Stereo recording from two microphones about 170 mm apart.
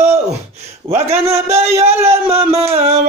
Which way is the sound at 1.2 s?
15° right (ahead or behind).